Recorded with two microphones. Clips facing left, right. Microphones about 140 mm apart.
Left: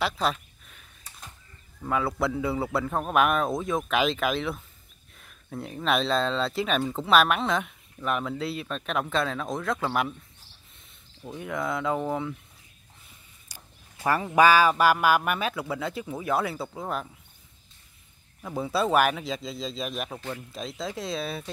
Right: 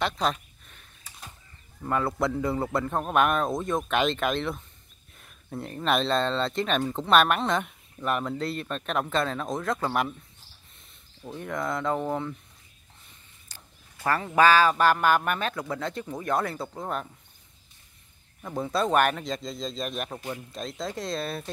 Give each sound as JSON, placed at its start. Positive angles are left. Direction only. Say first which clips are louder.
{"t": 0.0, "sound": "a sound", "louder": "even", "side_deg": 5}
{"t": 1.9, "sound": "speech", "louder": "even", "side_deg": 0}
{"t": 13.5, "sound": "a sound", "louder": "left 2 dB", "side_deg": 10}
{"t": 14.0, "sound": "speech", "louder": "left 1 dB", "side_deg": 10}
{"t": 18.4, "sound": "speech", "louder": "even", "side_deg": 5}
{"t": 20.2, "sound": "speech", "louder": "even", "side_deg": -15}
{"t": 20.5, "sound": "speech", "louder": "even", "side_deg": 0}